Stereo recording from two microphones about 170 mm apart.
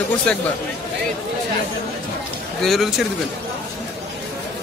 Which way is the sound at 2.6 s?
Centre (ahead or behind).